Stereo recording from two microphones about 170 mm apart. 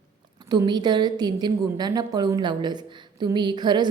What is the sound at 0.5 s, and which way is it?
A woman's voice, 25° right (ahead or behind).